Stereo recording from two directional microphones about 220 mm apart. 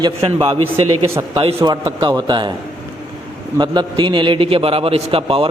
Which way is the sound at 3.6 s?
20° right (ahead or behind).